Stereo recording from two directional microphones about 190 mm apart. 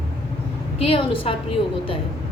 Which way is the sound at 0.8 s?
30° left (ahead or behind).